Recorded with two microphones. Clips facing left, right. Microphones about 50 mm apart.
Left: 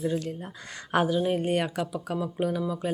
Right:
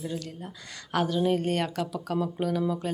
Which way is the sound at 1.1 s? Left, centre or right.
Centre.